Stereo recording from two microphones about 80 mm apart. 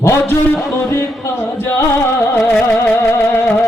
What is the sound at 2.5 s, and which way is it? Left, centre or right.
Music, centre.